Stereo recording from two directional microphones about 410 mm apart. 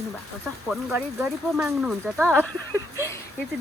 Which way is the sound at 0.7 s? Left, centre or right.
Centre.